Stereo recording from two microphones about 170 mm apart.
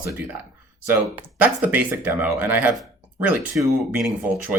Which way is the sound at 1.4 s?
10° right (ahead or behind).